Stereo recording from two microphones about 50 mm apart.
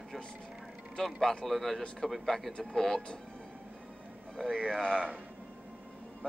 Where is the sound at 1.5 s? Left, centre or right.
Centre.